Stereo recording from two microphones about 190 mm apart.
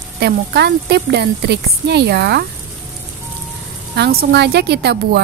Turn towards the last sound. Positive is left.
turn(degrees=-60)  # may be behind; listen again after turning